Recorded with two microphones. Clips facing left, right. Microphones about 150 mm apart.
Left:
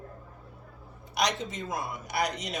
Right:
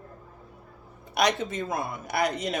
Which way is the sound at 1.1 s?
55° right (ahead or behind).